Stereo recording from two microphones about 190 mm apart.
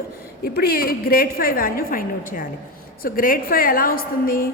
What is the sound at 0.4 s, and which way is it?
A woman's voice, 55° left (ahead or behind).